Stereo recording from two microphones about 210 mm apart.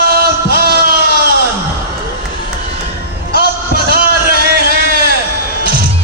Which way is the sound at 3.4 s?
45° right (ahead or behind).